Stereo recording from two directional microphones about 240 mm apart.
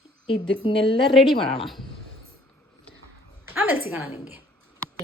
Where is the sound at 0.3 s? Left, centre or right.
Left.